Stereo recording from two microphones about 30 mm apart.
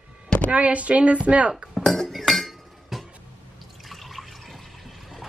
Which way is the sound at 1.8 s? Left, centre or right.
Centre.